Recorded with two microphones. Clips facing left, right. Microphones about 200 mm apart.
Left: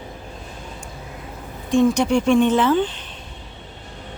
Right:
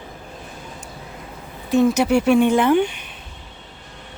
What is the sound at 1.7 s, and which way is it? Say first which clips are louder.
Speech: right 1 dB; 5° right (ahead or behind).